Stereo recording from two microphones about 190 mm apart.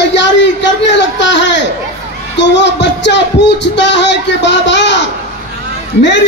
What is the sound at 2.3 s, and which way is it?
Speech, 65° left (ahead or behind).